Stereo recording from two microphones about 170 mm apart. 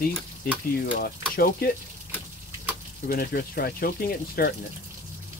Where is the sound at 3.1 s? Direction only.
60° left (ahead or behind).